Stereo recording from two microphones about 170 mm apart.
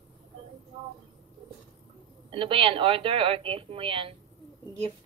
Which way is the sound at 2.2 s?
30° right (ahead or behind).